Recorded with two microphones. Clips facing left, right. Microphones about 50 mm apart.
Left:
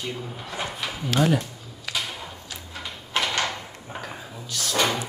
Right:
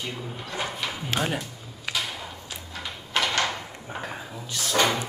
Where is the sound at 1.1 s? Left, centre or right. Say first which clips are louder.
Left 6 dB; right.